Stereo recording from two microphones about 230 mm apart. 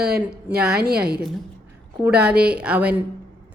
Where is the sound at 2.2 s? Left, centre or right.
Centre.